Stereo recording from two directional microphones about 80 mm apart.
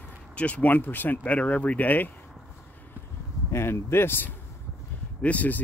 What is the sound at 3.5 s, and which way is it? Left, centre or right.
Speech, left.